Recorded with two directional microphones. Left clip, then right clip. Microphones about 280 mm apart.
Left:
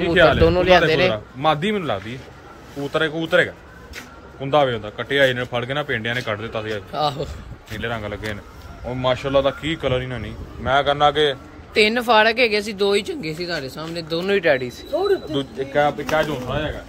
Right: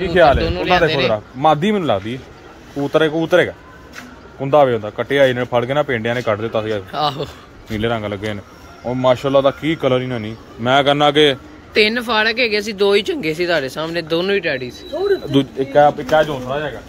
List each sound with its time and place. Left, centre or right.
0.0 s speech: right
0.4 s a man's voice: centre
1.1 s a man's voice: right
6.9 s speech: centre
7.8 s a man's voice: right
11.7 s speech: centre
15.3 s a man's voice: right